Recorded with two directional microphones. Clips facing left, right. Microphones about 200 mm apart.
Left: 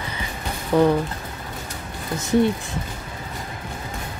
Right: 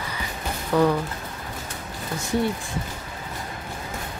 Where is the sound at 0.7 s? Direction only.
20° left (ahead or behind).